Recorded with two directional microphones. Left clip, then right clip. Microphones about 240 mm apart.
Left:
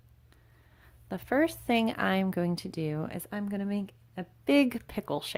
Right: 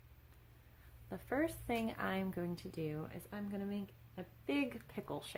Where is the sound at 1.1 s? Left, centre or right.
Left.